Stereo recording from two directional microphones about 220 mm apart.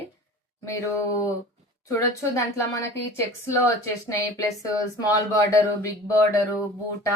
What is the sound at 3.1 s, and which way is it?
Speech, 15° left (ahead or behind).